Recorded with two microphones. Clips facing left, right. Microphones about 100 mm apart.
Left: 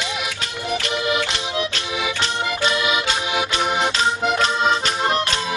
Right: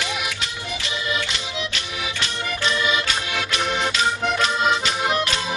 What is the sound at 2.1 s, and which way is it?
Accordion, 25° left (ahead or behind).